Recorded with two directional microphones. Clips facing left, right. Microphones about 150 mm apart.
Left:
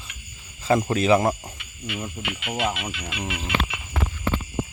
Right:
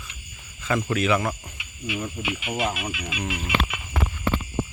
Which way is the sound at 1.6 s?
10° right (ahead or behind).